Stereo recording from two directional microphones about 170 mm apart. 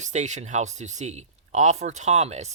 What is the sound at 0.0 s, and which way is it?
Speech, 45° right (ahead or behind).